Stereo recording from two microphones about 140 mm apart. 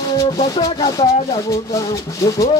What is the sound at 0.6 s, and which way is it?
Speech, 30° left (ahead or behind).